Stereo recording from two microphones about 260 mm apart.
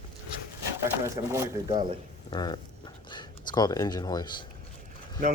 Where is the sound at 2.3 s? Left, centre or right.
Centre.